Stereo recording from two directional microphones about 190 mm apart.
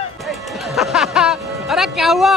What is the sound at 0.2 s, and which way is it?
Music, centre (ahead or behind).